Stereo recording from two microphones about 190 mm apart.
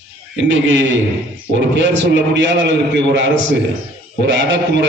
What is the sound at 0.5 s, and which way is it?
A man's voice, 80° right.